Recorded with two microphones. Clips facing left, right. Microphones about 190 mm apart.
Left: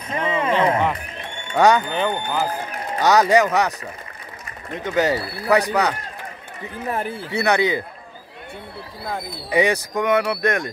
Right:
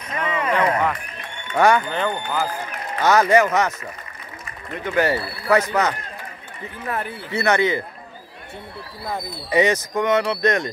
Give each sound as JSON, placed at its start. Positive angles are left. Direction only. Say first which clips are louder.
{"t": 0.1, "sound": "a sound", "louder": "left 2 dB", "side_deg": 30}
{"t": 1.5, "sound": "speech", "louder": "left 1 dB", "side_deg": 15}
{"t": 4.7, "sound": "speech", "louder": "even", "side_deg": 20}
{"t": 7.0, "sound": "speech", "louder": "left 1 dB", "side_deg": 15}
{"t": 9.5, "sound": "speech", "louder": "right 1 dB", "side_deg": 10}